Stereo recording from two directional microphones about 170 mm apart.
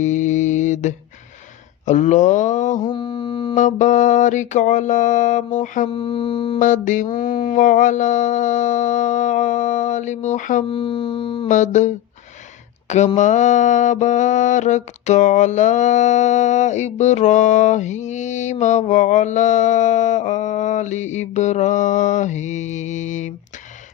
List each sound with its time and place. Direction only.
0.0 s mantra: 45° left (ahead or behind)
2.8 s mantra: 30° left (ahead or behind)
3.5 s mantra: 50° left (ahead or behind)
5.9 s music: 30° left (ahead or behind)
6.6 s mantra: 50° left (ahead or behind)
10.7 s music: 30° left (ahead or behind)
11.4 s mantra: 45° left (ahead or behind)
13.1 s mantra: 45° left (ahead or behind)